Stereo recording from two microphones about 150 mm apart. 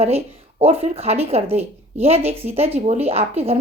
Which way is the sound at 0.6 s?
45° right (ahead or behind).